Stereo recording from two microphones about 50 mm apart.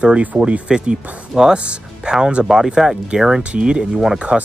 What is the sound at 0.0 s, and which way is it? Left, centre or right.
Speech, right.